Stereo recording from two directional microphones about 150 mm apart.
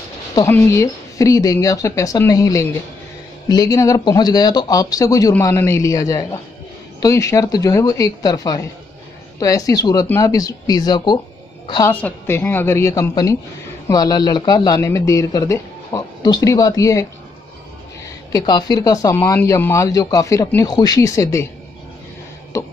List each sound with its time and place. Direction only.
0.5 s speech: 15° left (ahead or behind)
11.8 s a woman's voice: 15° left (ahead or behind)
18.3 s speech: 25° left (ahead or behind)
22.5 s speech: 20° left (ahead or behind)